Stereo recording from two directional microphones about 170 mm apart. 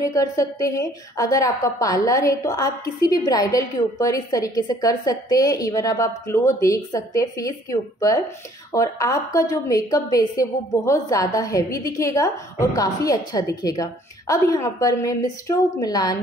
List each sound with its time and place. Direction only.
0.0 s a woman's voice: 20° left (ahead or behind)